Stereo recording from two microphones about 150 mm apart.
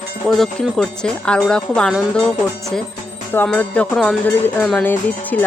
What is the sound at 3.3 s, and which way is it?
Music, 10° left (ahead or behind).